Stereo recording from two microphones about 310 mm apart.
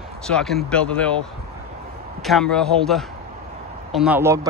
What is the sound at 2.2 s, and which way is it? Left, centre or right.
Speech, centre.